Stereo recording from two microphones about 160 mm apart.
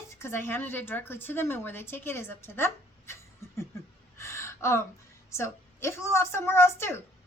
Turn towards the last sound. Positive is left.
turn(degrees=15)  # may be behind; listen again after turning